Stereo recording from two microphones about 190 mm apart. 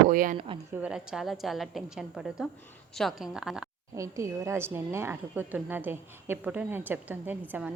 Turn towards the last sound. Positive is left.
turn(degrees=-10)  # may be behind; listen again after turning